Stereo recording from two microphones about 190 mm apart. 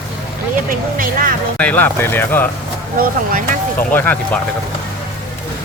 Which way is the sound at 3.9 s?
10° left (ahead or behind).